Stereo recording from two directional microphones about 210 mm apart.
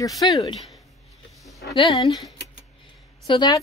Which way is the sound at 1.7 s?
20° left (ahead or behind).